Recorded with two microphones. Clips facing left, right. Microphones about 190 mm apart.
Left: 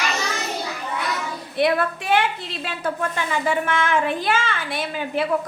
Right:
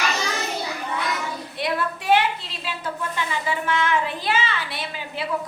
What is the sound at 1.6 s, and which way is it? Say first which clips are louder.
Speech: left 3 dB; 55° left (ahead or behind).